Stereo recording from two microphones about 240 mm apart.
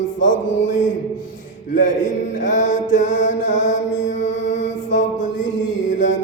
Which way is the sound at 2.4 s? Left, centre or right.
Left.